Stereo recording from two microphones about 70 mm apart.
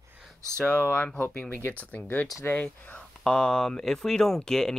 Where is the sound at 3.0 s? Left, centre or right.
Centre.